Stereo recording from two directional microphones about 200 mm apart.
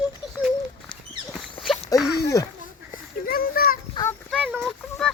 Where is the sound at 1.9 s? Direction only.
15° left (ahead or behind).